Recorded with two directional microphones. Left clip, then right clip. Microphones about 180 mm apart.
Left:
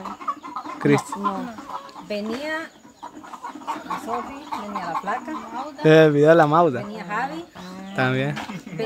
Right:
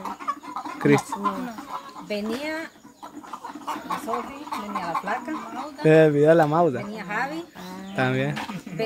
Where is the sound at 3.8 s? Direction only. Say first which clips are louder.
Even; 15° right (ahead or behind).